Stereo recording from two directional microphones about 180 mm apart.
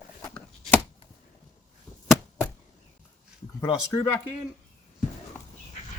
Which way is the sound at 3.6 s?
20° left (ahead or behind).